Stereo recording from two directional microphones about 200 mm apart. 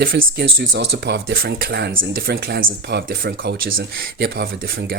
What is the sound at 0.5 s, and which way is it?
Speech, 60° right (ahead or behind).